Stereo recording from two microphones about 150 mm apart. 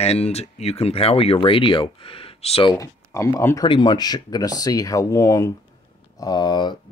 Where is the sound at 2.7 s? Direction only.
20° left (ahead or behind).